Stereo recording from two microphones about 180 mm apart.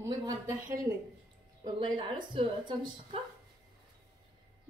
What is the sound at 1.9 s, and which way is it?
Speech, 25° right (ahead or behind).